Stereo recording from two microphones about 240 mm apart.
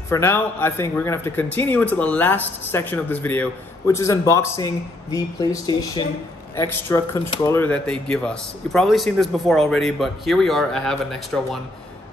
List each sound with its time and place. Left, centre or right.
0.1 s a man's voice: centre